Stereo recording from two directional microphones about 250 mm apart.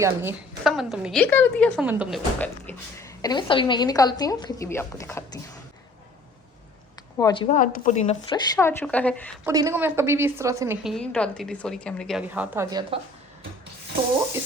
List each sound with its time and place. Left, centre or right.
0.0 s a woman's voice: centre
7.2 s a woman's voice: centre
8.4 s a woman's voice: centre
9.4 s a woman's voice: centre
10.8 s a woman's voice: centre